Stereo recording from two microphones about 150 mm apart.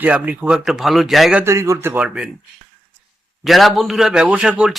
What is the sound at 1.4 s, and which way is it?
Speech, 20° right (ahead or behind).